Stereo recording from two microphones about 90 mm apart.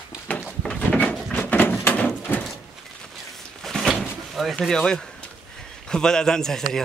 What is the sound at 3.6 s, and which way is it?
Door, centre (ahead or behind).